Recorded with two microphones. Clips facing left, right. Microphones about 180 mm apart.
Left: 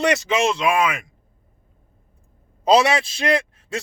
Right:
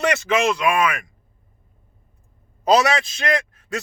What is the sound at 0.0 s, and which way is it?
Speech, 30° left (ahead or behind).